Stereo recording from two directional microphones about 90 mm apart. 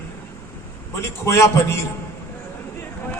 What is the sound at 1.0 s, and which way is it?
Speech, 30° left (ahead or behind).